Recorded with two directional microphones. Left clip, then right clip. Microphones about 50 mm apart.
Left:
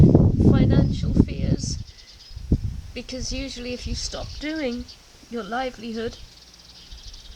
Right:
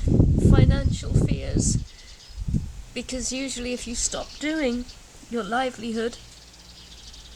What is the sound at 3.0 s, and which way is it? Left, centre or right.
Speech, centre.